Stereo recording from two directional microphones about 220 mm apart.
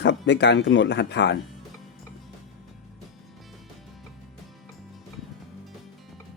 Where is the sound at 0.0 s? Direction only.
50° left (ahead or behind).